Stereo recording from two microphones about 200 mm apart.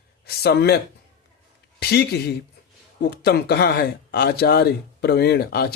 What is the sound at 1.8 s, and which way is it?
Speech, 55° left (ahead or behind).